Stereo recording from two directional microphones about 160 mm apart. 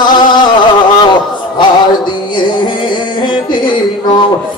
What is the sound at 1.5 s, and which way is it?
Music, 30° left (ahead or behind).